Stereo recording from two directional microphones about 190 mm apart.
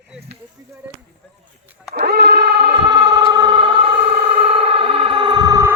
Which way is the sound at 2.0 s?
55° right (ahead or behind).